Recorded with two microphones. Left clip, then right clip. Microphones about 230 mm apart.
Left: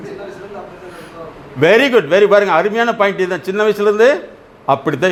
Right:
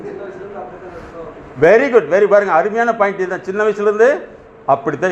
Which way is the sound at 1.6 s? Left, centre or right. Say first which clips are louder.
Even; left.